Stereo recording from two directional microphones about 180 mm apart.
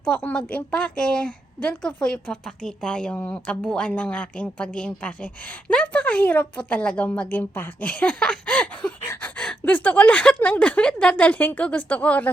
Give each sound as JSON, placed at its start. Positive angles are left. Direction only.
{"t": 0.0, "sound": "a woman's voice", "side_deg": 5}